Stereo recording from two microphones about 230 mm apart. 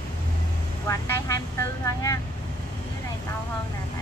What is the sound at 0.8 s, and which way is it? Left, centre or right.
Speech, centre.